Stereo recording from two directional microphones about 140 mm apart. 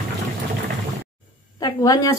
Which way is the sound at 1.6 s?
25° left (ahead or behind).